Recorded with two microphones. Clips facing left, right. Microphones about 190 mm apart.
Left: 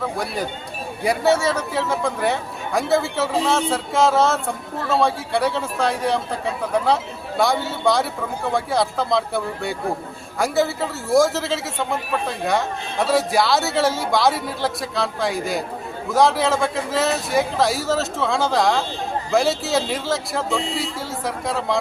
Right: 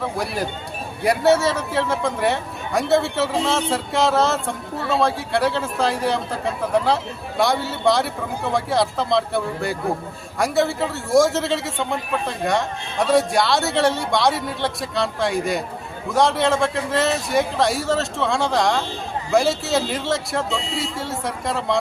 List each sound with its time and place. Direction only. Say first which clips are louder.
1.0 s a man's voice: right 1 dB; centre (ahead or behind)